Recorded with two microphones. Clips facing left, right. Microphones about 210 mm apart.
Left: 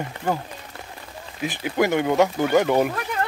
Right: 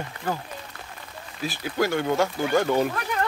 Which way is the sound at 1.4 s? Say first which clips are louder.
Left 3 dB; 20° left (ahead or behind).